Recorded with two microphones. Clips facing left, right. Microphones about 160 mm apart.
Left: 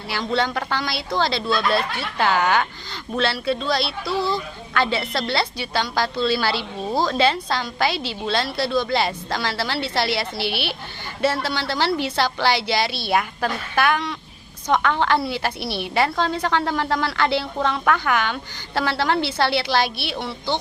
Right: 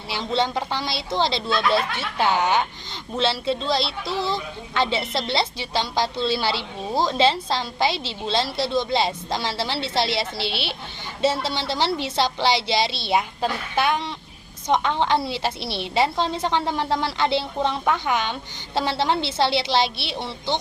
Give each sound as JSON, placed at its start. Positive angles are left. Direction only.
{"t": 0.1, "sound": "a woman's voice", "side_deg": -25}